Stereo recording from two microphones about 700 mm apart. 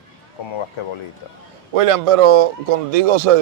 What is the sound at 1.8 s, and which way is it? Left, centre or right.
A man's voice, right.